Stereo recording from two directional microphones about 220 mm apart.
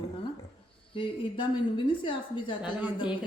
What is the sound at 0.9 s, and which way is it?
A woman's voice, 25° left (ahead or behind).